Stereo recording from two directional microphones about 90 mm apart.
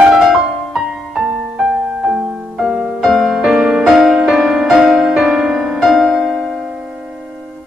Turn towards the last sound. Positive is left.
turn(degrees=0)  # may be behind; listen again after turning